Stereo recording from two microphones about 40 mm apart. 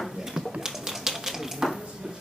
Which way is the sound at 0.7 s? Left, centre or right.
Centre.